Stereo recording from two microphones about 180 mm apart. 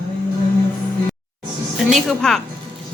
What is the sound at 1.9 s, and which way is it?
Speech, centre (ahead or behind).